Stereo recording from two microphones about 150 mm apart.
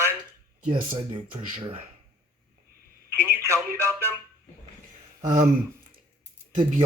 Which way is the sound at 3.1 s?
15° right (ahead or behind).